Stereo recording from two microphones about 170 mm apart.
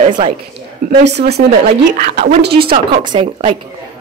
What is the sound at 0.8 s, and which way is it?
Speech, 70° right (ahead or behind).